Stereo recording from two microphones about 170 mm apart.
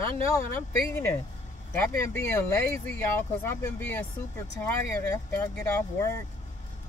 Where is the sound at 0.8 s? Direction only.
10° left (ahead or behind).